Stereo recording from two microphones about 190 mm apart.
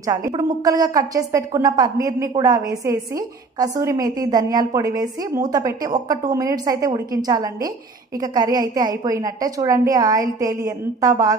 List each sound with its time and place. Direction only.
0.0 s a woman's voice: 15° right (ahead or behind)